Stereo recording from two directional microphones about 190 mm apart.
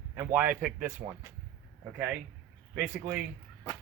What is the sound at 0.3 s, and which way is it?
Speech, 10° right (ahead or behind).